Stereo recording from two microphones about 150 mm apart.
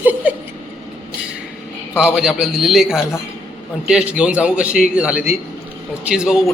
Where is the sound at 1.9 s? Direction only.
5° right (ahead or behind).